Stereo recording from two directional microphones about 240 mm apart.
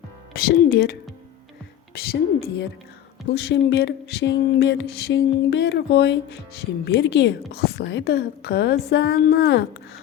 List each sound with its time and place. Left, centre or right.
0.3 s a woman's voice: left
2.0 s a woman's voice: left